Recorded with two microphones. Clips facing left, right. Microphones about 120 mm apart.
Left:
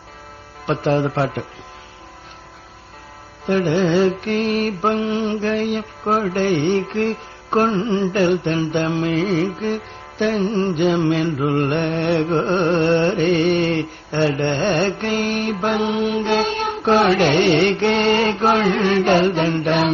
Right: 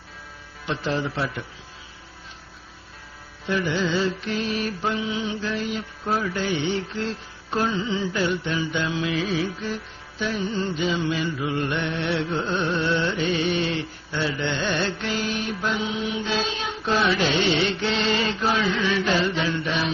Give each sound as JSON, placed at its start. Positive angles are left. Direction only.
{"t": 0.7, "sound": "mantra", "side_deg": 50}
{"t": 3.4, "sound": "mantra", "side_deg": 50}